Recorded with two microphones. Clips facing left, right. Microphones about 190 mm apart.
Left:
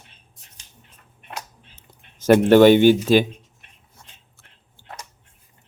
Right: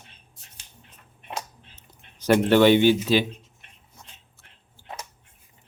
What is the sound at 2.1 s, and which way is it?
Speech, 45° left (ahead or behind).